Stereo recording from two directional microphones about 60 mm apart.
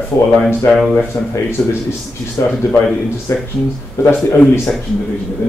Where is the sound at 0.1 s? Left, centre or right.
Left.